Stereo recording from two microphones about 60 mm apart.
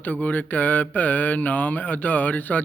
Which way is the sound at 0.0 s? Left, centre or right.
Left.